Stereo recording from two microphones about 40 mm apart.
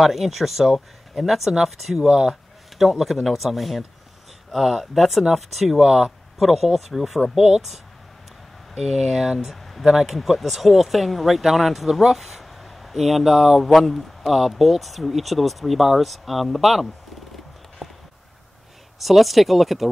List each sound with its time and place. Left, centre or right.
0.0 s speech: centre
2.0 s speech: centre
2.8 s speech: centre
5.9 s speech: centre
6.3 s speech: centre
8.7 s speech: centre
17.8 s a sound: centre
18.9 s speech: centre